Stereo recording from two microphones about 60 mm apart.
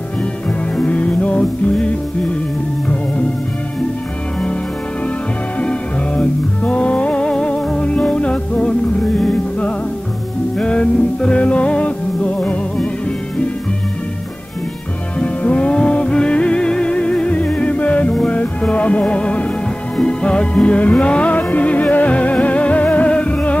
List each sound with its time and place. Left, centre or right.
0.7 s music: left
5.6 s music: centre
15.1 s music: left